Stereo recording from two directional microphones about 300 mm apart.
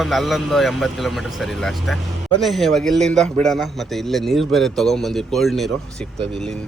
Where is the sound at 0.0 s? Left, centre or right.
Centre.